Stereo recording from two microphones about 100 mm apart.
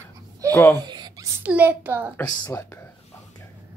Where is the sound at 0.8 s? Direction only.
45° right (ahead or behind).